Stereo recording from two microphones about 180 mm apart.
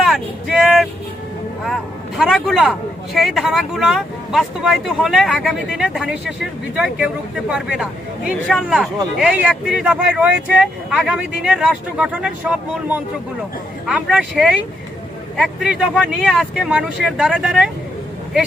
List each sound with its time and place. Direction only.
0.0 s vehicle: centre (ahead or behind)
3.2 s speech: centre (ahead or behind)